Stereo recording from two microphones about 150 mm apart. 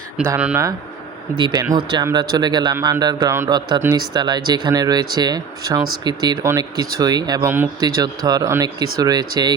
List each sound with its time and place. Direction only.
0.3 s speech: 10° right (ahead or behind)
1.4 s speech: 30° right (ahead or behind)
4.1 s speech: 30° right (ahead or behind)